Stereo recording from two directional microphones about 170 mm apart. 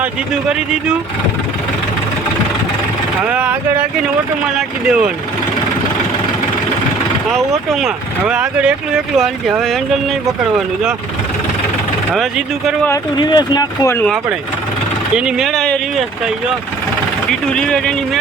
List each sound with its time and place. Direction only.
3.2 s speech: 10° right (ahead or behind)
7.3 s speech: centre (ahead or behind)
12.1 s speech: centre (ahead or behind)
12.9 s speech: 25° left (ahead or behind)
15.1 s speech: 5° right (ahead or behind)
17.5 s speech: 5° left (ahead or behind)